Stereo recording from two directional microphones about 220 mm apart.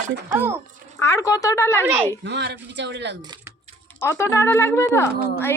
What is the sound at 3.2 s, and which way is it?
Speech, 20° right (ahead or behind).